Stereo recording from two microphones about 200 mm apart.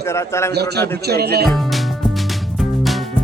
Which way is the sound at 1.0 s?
55° right (ahead or behind).